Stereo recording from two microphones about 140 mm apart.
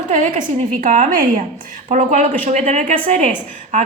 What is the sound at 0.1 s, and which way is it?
A woman's voice, 65° right (ahead or behind).